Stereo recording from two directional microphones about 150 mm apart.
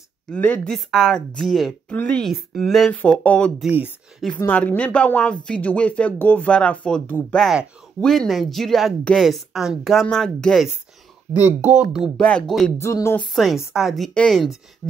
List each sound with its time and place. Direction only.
0.3 s speech: 10° left (ahead or behind)
3.6 s speech: 10° right (ahead or behind)
4.4 s speech: 10° left (ahead or behind)
11.3 s speech: 10° right (ahead or behind)
12.2 s speech: 5° left (ahead or behind)
12.7 s speech: 20° left (ahead or behind)
13.2 s speech: centre (ahead or behind)